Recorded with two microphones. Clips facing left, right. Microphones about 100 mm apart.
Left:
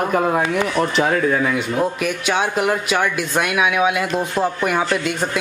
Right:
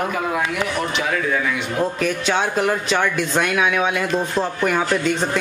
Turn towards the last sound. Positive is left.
turn(degrees=5)  # may be behind; listen again after turning